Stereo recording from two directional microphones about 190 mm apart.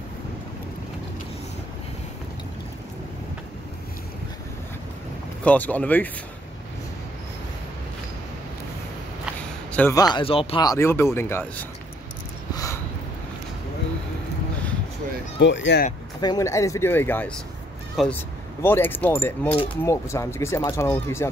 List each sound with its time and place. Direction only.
5.4 s speech: 10° left (ahead or behind)
9.7 s a sound: 10° left (ahead or behind)
9.9 s speech: 20° left (ahead or behind)
15.3 s speech: 70° left (ahead or behind)
16.2 s speech: 20° left (ahead or behind)
18.0 s speech: centre (ahead or behind)
18.6 s speech: 10° left (ahead or behind)